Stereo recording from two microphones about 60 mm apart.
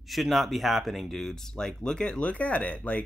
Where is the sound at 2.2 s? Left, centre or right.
Left.